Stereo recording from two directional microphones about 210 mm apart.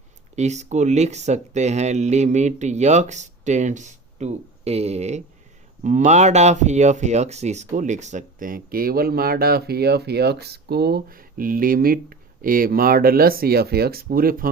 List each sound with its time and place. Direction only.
0.3 s speech: 35° right (ahead or behind)